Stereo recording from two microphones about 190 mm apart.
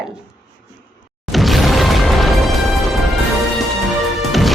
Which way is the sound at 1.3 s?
Centre (ahead or behind).